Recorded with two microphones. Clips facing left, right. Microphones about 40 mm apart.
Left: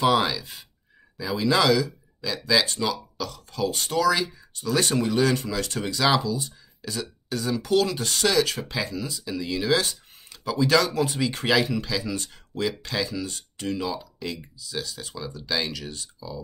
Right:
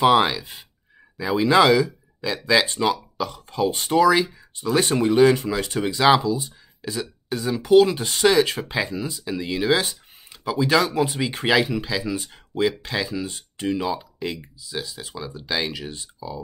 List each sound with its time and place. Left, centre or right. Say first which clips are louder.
0.0 s speech: right 4 dB; right